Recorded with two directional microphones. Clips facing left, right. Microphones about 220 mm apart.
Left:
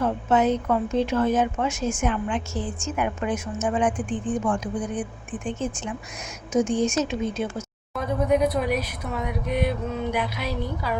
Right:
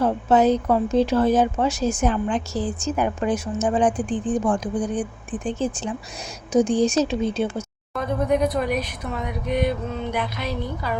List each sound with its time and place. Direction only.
0.0 s a woman's voice: 35° right (ahead or behind)
7.9 s speech: 5° left (ahead or behind)